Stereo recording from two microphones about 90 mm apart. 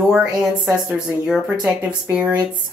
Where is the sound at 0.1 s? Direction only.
5° right (ahead or behind).